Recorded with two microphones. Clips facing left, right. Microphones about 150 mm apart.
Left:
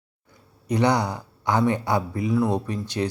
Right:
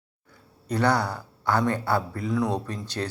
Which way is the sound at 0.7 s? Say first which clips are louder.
Left 2 dB; 15° left (ahead or behind).